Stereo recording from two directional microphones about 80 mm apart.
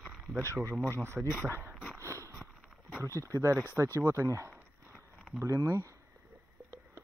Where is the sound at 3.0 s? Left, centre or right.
Right.